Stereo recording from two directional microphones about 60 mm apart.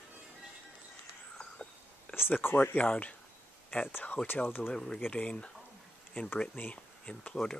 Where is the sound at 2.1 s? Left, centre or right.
Left.